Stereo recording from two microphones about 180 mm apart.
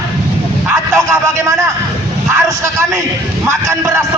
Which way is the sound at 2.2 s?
15° right (ahead or behind).